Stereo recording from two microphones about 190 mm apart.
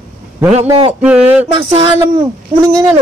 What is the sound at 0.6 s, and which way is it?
Speech, 30° right (ahead or behind).